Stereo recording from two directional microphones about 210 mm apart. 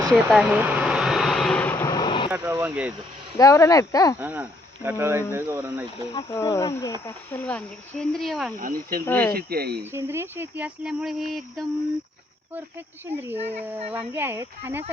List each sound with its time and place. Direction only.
0.1 s a sound: centre (ahead or behind); by 2.3 s 20° left (ahead or behind)
2.3 s speech: 10° right (ahead or behind)
3.3 s speech: 15° left (ahead or behind)
4.2 s speech: 10° right (ahead or behind)
6.1 s speech: 15° left (ahead or behind); by 8.5 s centre (ahead or behind)
8.5 s speech: 40° right (ahead or behind)
9.0 s speech: 10° left (ahead or behind)
9.3 s speech: 45° right (ahead or behind)
9.9 s speech: 10° right (ahead or behind)
13.1 s speech: 10° right (ahead or behind)
13.3 s speech: 30° right (ahead or behind)
13.9 s speech: 10° right (ahead or behind)